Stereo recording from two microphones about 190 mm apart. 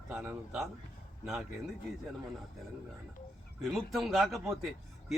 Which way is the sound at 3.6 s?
Centre (ahead or behind).